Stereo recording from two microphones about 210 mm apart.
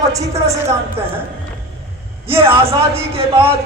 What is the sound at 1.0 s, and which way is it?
Speech, 10° right (ahead or behind).